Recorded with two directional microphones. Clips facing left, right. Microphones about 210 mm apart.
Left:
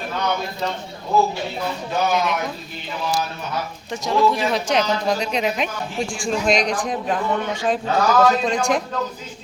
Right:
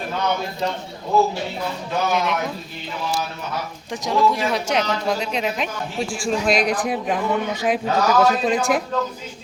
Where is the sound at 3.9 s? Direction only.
10° right (ahead or behind).